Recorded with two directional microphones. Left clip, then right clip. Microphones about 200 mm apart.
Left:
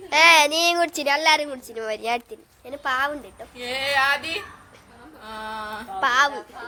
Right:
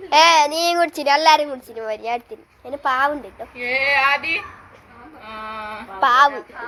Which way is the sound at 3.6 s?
65° left (ahead or behind).